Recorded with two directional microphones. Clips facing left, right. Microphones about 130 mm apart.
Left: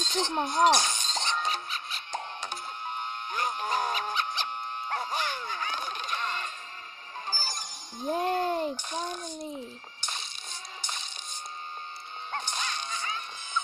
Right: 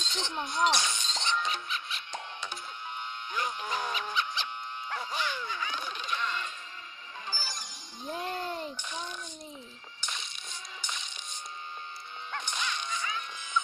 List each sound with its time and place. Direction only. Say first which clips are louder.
0.0 s music: left 7 dB; 45° left (ahead or behind)
12.3 s music: left 1 dB; 35° left (ahead or behind)